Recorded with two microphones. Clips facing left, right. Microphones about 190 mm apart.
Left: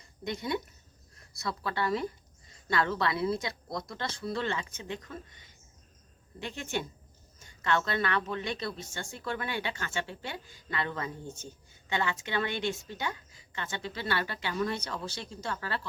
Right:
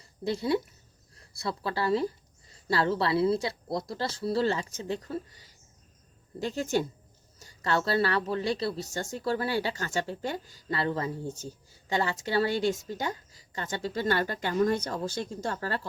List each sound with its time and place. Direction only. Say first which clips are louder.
0.0 s a woman's voice: right 6 dB; 30° right (ahead or behind)